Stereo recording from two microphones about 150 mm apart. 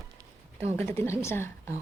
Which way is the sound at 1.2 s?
15° left (ahead or behind).